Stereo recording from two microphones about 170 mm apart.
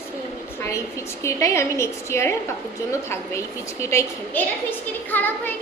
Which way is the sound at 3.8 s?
15° left (ahead or behind).